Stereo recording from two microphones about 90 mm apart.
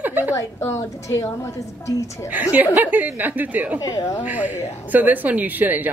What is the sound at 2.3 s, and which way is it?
A woman's voice, 20° right (ahead or behind).